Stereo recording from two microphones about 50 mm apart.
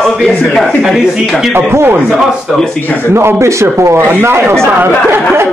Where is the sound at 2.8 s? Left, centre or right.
Left.